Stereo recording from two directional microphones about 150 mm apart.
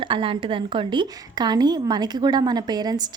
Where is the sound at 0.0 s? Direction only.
35° right (ahead or behind).